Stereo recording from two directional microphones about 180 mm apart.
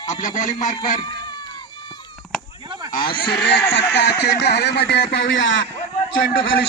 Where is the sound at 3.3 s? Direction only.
65° left (ahead or behind); by 5.5 s 90° left.